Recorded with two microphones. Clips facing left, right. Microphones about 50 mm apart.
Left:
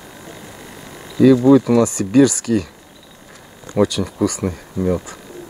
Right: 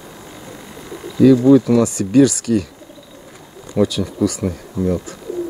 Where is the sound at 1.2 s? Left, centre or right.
Centre.